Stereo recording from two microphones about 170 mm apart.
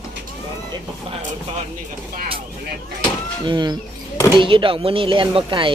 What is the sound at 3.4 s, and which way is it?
Speech, 25° right (ahead or behind).